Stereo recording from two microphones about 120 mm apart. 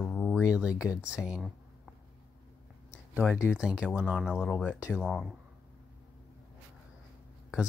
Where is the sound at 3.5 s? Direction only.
10° right (ahead or behind).